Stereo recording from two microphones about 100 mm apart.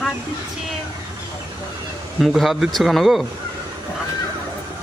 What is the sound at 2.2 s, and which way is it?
Speech, centre (ahead or behind).